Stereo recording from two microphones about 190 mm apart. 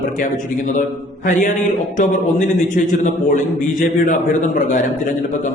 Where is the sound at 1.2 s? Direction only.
45° left (ahead or behind).